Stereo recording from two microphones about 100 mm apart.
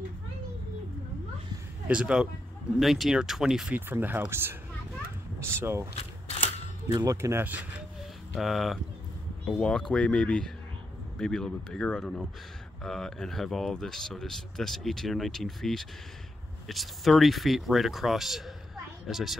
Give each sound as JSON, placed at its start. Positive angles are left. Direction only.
{"t": 1.9, "sound": "speech", "side_deg": -10}
{"t": 3.7, "sound": "speech", "side_deg": -20}
{"t": 7.2, "sound": "speech", "side_deg": -25}
{"t": 8.4, "sound": "speech", "side_deg": 0}